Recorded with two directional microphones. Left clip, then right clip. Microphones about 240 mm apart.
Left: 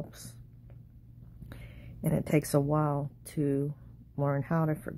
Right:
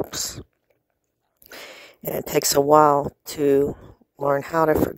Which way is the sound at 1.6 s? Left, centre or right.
Right.